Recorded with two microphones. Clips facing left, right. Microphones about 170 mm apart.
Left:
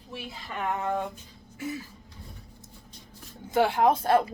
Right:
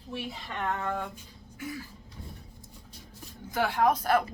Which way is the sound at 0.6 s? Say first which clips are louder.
Left 3 dB; 15° left (ahead or behind).